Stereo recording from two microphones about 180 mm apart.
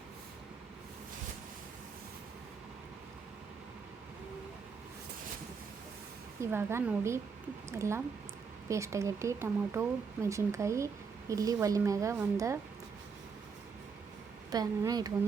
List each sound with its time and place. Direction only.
6.4 s a woman's voice: 15° right (ahead or behind)
14.5 s a woman's voice: 20° right (ahead or behind)